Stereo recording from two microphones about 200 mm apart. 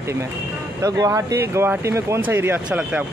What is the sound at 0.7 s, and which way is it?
Speech, 15° right (ahead or behind).